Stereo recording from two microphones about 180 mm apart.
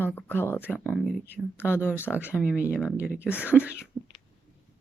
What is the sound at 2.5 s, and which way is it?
Speech, 5° right (ahead or behind).